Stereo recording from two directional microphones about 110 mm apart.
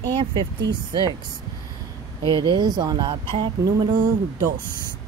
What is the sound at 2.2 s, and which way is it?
Speech, 45° right (ahead or behind).